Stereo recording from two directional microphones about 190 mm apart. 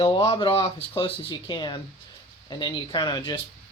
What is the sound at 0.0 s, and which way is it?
Speech, 30° left (ahead or behind).